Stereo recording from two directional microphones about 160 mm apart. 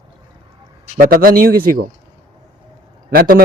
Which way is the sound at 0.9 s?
60° right (ahead or behind).